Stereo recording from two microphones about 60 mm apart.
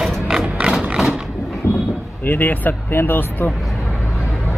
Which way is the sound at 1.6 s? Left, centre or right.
Left.